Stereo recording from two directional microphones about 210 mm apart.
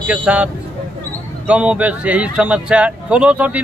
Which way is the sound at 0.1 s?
5° right (ahead or behind).